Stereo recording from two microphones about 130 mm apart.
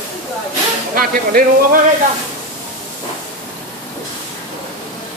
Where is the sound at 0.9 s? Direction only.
90° right.